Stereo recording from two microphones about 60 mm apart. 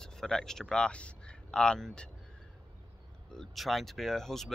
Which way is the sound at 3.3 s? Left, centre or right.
Centre.